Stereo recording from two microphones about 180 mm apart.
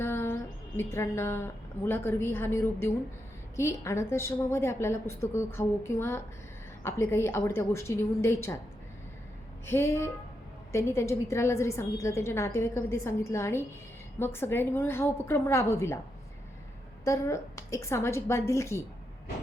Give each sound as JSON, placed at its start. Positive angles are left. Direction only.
{"t": 0.0, "sound": "a woman's voice", "side_deg": 10}
{"t": 9.6, "sound": "a woman's voice", "side_deg": 15}
{"t": 17.0, "sound": "a woman's voice", "side_deg": 15}